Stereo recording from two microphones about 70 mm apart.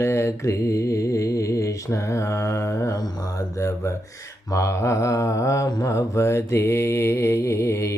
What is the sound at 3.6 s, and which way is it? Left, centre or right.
Speech, left.